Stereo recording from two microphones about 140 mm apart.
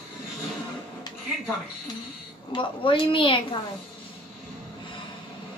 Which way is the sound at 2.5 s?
35° left (ahead or behind).